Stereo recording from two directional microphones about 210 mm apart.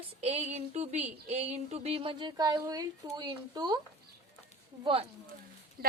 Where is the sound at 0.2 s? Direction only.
30° right (ahead or behind).